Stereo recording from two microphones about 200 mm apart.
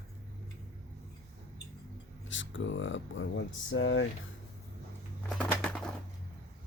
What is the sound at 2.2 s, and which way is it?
Speech, 70° left (ahead or behind).